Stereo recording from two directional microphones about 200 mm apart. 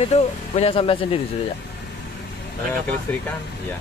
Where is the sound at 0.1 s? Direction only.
30° left (ahead or behind).